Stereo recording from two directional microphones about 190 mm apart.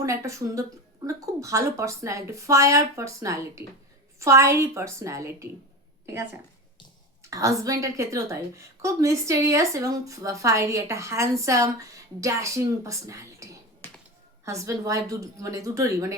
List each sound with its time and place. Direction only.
0.0 s a woman's voice: 15° right (ahead or behind)
7.2 s a woman's voice: 15° right (ahead or behind)
13.8 s a sound: 10° left (ahead or behind)
14.4 s a woman's voice: 15° right (ahead or behind)